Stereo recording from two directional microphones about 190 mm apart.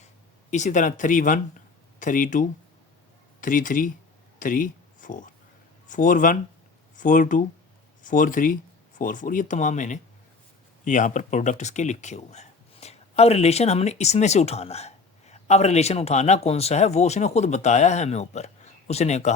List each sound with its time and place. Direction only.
0.5 s speech: 40° left (ahead or behind)
4.4 s a sound: 45° left (ahead or behind)
5.9 s speech: 45° left (ahead or behind)